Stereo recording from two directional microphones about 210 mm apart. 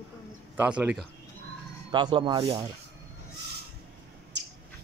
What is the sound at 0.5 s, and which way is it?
Speech, 10° right (ahead or behind).